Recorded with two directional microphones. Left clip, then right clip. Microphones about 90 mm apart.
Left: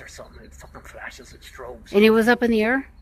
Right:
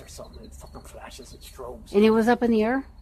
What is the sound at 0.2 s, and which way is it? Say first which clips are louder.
Speech: left 1 dB; centre (ahead or behind).